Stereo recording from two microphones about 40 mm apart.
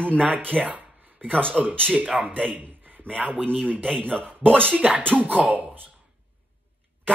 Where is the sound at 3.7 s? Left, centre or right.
Centre.